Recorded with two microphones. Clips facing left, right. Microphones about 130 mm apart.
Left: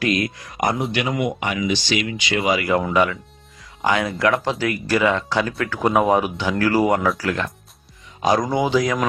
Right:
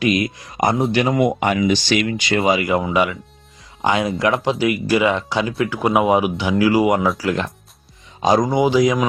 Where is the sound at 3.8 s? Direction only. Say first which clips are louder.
Right 1 dB; 20° right (ahead or behind).